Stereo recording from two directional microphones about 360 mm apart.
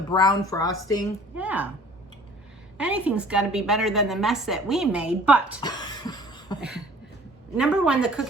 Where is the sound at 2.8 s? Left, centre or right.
Centre.